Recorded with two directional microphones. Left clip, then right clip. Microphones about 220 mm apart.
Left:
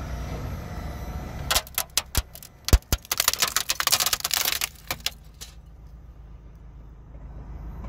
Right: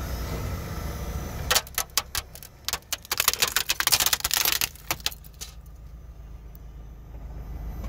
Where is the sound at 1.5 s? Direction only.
10° left (ahead or behind).